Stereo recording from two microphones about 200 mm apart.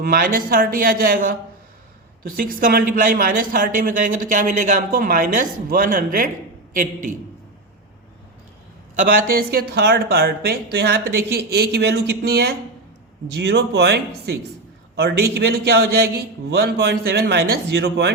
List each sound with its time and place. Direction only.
0.0 s speech: 45° right (ahead or behind)
9.0 s speech: 45° right (ahead or behind)